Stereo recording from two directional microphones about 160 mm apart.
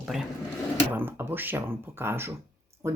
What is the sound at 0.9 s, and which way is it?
Speech, 15° right (ahead or behind).